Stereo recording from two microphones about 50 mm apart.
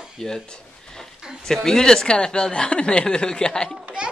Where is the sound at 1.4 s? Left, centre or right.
Centre.